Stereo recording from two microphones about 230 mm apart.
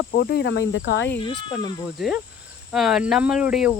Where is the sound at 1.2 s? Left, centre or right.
Left.